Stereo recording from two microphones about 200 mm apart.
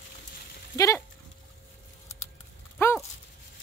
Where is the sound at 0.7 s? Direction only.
15° left (ahead or behind).